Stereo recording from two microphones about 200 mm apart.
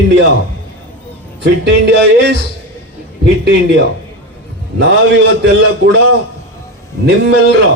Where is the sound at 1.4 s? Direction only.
60° right (ahead or behind).